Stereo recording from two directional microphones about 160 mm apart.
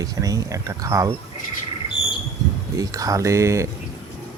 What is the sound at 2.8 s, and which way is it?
Speech, 20° right (ahead or behind).